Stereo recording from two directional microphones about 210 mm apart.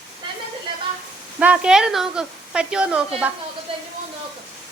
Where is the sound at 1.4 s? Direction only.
5° right (ahead or behind).